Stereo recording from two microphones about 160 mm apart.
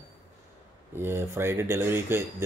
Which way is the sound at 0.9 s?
15° right (ahead or behind).